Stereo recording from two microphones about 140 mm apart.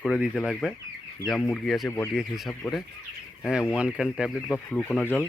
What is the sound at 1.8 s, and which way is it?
Speech, 15° left (ahead or behind).